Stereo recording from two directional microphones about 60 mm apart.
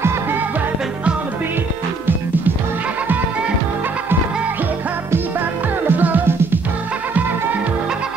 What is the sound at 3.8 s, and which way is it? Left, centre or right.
Music, right.